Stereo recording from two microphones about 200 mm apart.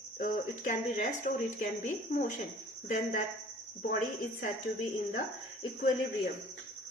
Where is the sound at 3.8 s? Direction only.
50° left (ahead or behind).